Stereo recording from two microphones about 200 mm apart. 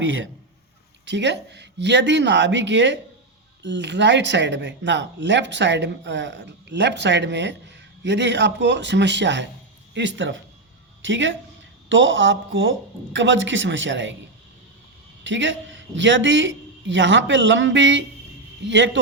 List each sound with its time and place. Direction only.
1.0 s speech: 60° right (ahead or behind)
15.2 s a man's voice: 65° right (ahead or behind)